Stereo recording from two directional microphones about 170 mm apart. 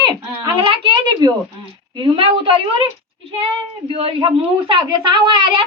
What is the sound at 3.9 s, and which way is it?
A woman's voice, 30° right (ahead or behind).